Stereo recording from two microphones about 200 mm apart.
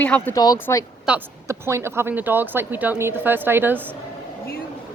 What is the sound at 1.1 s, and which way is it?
A woman's voice, 10° right (ahead or behind).